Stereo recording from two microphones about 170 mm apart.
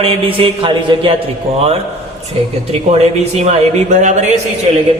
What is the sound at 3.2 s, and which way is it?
Speech, 40° right (ahead or behind).